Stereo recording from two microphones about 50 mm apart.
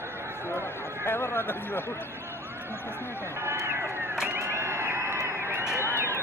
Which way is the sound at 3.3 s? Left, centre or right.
Right.